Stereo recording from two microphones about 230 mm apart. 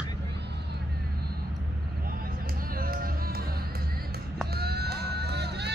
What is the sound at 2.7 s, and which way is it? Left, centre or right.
Music, right.